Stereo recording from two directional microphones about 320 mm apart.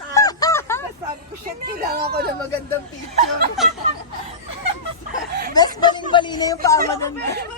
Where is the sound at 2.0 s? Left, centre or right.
Right.